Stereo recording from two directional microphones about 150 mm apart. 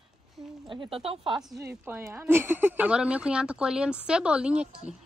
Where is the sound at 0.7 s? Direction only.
35° right (ahead or behind).